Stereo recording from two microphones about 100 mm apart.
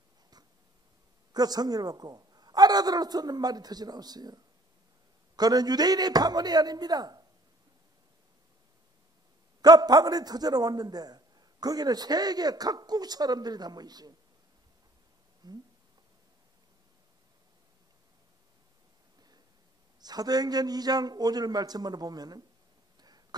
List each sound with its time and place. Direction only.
1.3 s a man's voice: 40° right (ahead or behind)
9.6 s a man's voice: 40° right (ahead or behind)
15.4 s speech: 45° right (ahead or behind)
20.0 s a man's voice: 40° right (ahead or behind)
22.9 s a sound: 40° right (ahead or behind)